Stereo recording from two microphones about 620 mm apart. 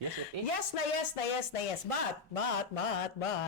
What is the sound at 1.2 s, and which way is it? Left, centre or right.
Speech, left.